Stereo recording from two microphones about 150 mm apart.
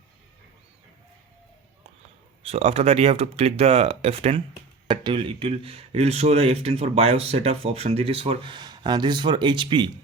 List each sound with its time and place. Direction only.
2.4 s speech: 40° right (ahead or behind)